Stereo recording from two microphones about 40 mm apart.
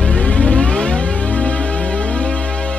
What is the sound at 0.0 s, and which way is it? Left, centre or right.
Music, left.